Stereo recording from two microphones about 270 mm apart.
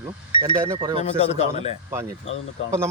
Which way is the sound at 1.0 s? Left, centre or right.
Left.